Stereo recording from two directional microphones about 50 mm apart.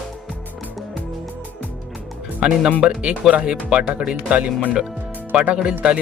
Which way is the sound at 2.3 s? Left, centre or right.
Centre.